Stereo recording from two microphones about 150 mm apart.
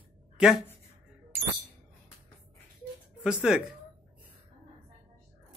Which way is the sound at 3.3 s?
5° right (ahead or behind).